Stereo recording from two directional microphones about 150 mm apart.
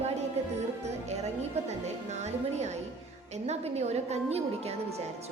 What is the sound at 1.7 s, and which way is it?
A woman's voice, 50° right (ahead or behind).